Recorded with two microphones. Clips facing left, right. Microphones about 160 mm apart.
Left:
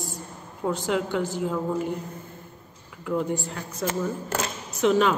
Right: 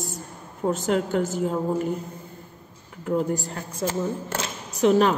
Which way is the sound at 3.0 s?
40° right (ahead or behind).